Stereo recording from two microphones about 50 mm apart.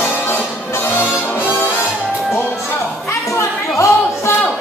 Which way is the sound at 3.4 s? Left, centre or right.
Left.